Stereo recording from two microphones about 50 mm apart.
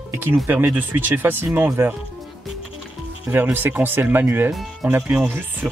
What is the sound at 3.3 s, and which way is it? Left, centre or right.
Speech, right.